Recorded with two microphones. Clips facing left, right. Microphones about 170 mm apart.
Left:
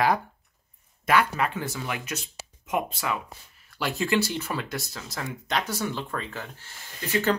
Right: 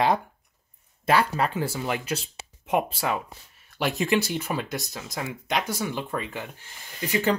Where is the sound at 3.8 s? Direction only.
20° right (ahead or behind).